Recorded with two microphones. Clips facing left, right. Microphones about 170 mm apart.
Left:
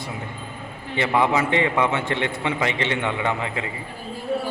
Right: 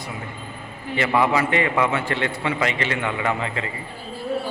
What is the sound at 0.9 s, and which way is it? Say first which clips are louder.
A man's voice: even; 20° left (ahead or behind).